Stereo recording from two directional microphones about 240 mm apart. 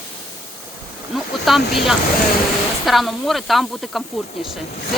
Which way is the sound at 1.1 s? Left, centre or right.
Centre.